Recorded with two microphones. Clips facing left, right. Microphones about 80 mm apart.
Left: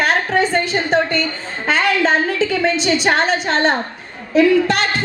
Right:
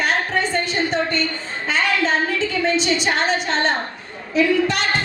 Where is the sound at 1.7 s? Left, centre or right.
Left.